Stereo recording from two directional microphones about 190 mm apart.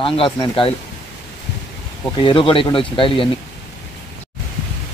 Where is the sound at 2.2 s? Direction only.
25° left (ahead or behind).